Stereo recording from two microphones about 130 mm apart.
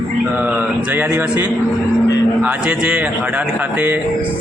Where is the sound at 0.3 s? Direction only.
15° right (ahead or behind).